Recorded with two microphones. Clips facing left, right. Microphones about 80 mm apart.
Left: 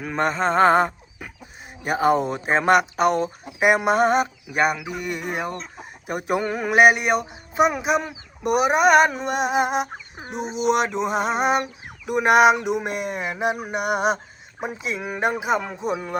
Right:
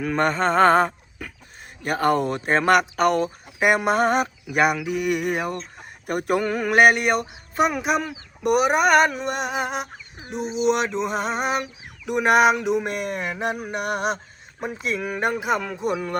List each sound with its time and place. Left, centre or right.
0.0 s speech: centre
10.4 s a sound: left
10.7 s speech: centre